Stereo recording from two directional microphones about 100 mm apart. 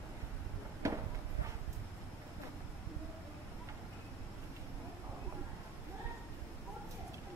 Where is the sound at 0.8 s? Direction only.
30° right (ahead or behind).